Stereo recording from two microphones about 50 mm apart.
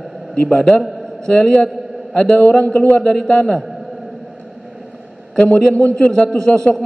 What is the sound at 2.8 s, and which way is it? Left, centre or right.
Speech, left.